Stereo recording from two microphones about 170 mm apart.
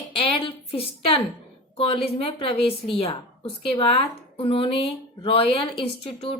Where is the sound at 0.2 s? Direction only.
35° left (ahead or behind).